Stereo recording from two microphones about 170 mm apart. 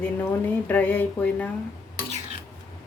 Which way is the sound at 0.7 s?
10° left (ahead or behind).